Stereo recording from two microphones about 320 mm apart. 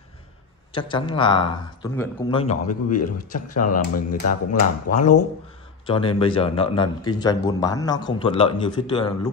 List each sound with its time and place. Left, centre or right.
0.7 s a man's voice: centre